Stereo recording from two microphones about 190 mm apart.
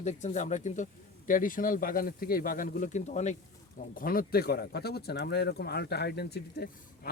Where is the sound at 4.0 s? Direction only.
50° left (ahead or behind).